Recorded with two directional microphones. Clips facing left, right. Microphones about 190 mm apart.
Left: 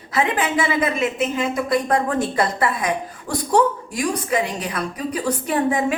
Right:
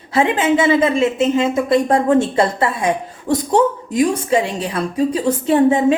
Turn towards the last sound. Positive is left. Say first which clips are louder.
# right 7 dB
turn(degrees=-25)  # may be behind; listen again after turning